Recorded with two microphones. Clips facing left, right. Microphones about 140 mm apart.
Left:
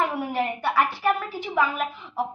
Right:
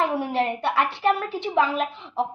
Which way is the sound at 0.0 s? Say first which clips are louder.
Right 2 dB; 30° right (ahead or behind).